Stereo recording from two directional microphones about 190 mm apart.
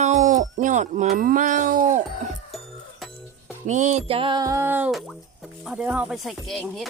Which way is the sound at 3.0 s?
Centre (ahead or behind).